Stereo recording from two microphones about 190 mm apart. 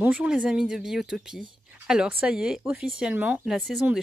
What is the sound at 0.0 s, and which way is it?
Speech, 5° right (ahead or behind).